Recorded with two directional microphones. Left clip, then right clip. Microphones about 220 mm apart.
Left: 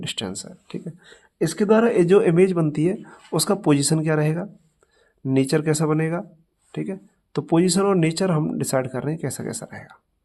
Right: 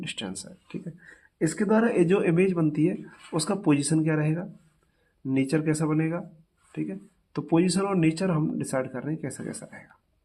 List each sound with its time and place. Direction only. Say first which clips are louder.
0.0 s speech: left 6 dB; 30° left (ahead or behind)